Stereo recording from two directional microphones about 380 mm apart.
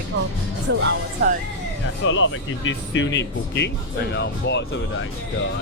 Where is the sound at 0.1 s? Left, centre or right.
Right.